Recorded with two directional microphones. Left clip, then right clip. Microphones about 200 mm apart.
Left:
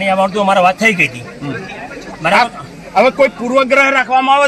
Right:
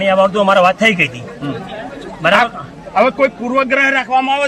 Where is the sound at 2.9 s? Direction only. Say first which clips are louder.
Left 2 dB; 50° left (ahead or behind).